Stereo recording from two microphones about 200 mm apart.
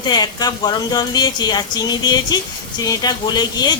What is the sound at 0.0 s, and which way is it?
A woman's voice, 20° left (ahead or behind).